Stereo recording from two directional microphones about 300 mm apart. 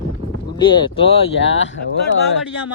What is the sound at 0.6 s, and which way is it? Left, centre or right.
Speech, centre.